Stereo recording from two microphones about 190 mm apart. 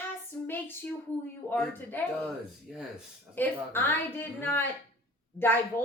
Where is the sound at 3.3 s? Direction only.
10° left (ahead or behind).